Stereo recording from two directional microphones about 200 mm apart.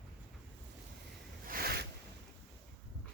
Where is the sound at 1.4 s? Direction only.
45° right (ahead or behind).